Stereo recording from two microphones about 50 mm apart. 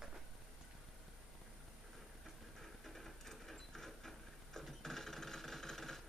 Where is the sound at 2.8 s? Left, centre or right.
Centre.